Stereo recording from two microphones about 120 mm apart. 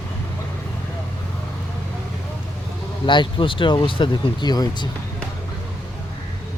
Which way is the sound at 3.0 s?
40° left (ahead or behind).